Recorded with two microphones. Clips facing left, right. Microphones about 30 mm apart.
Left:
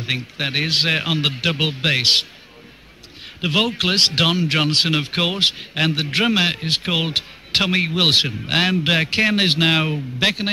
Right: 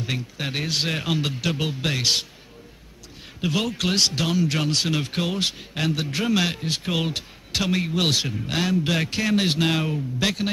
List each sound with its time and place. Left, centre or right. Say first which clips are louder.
0.0 s a man's voice: left 5 dB; left
3.3 s a man's voice: left 6 dB; left
4.1 s a man's voice: left 7 dB; left
4.4 s a man's voice: left 5 dB; left
6.3 s a man's voice: left 4 dB; left